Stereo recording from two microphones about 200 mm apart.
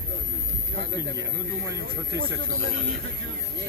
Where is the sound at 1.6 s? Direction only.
15° right (ahead or behind).